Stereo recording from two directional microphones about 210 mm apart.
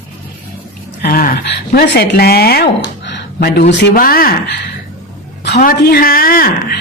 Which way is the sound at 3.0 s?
55° left (ahead or behind).